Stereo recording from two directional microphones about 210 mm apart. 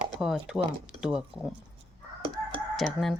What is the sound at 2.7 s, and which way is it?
Speech, centre (ahead or behind).